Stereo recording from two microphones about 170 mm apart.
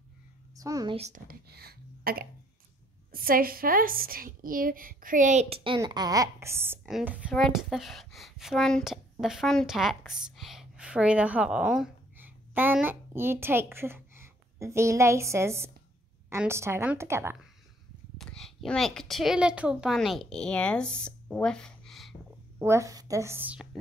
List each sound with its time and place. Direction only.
0.6 s a woman's voice: 20° right (ahead or behind)
0.9 s speech: 40° right (ahead or behind)
1.2 s a sound: 65° right (ahead or behind)
3.1 s a woman's voice: 60° right (ahead or behind); by 17.4 s 15° right (ahead or behind)
18.1 s a child's voice: centre (ahead or behind)
22.6 s a woman's voice: 15° right (ahead or behind)